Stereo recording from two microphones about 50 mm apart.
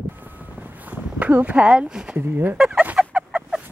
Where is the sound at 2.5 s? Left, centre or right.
Centre.